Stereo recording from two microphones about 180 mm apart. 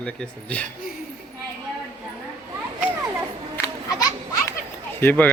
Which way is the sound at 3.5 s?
15° left (ahead or behind).